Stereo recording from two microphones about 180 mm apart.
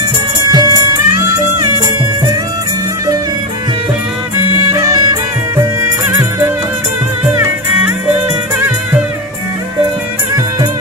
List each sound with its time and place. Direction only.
0.5 s music: 20° right (ahead or behind)
4.7 s music: 15° right (ahead or behind)
7.3 s music: 15° right (ahead or behind)